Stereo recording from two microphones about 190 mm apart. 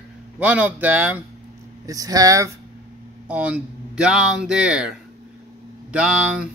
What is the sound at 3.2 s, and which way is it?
Speech, 5° right (ahead or behind).